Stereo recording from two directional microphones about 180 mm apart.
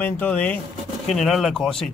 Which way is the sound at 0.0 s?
10° left (ahead or behind).